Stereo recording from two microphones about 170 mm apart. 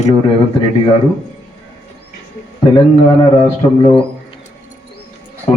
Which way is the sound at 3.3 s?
30° left (ahead or behind).